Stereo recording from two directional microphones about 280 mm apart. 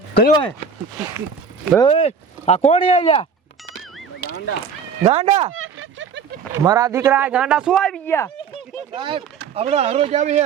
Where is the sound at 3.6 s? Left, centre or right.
Centre.